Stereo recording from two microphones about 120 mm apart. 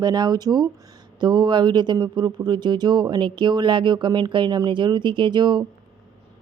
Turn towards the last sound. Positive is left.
turn(degrees=-40)  # may be behind; listen again after turning